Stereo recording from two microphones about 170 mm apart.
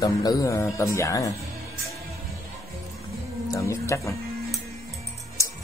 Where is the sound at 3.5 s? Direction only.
15° left (ahead or behind).